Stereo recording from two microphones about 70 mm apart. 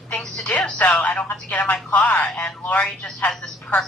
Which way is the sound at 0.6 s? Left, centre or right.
Centre.